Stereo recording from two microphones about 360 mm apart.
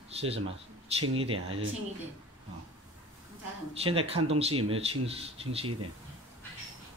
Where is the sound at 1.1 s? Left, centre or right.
Centre.